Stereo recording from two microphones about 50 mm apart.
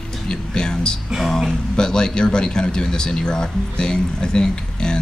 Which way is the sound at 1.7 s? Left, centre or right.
Centre.